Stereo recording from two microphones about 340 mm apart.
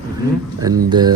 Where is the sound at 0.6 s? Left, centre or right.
Centre.